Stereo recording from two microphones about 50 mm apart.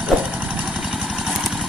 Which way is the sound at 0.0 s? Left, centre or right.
Right.